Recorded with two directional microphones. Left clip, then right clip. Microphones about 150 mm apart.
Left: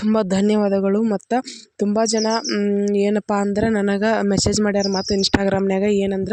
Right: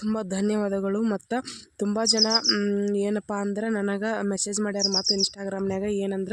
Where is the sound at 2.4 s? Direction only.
35° left (ahead or behind).